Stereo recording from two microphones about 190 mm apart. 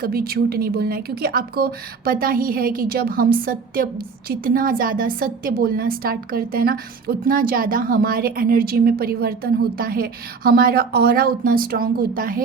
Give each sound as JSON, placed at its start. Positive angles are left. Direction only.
{"t": 0.0, "sound": "speech", "side_deg": -50}